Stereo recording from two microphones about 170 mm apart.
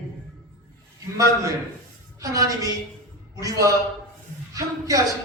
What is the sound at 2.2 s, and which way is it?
Speech, 20° right (ahead or behind).